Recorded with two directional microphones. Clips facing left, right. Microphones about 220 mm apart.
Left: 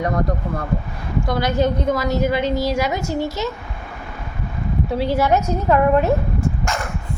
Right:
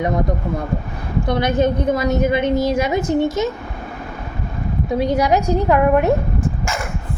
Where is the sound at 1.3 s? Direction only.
20° right (ahead or behind).